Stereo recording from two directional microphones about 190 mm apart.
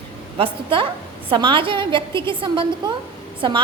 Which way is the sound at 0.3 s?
25° right (ahead or behind).